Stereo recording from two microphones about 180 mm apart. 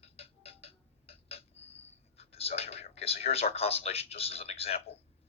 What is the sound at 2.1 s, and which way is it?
A man's voice, 35° left (ahead or behind).